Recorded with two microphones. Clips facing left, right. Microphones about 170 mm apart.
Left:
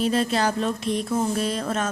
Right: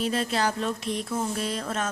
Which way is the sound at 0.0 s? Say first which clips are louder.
Left 4 dB; 35° left (ahead or behind).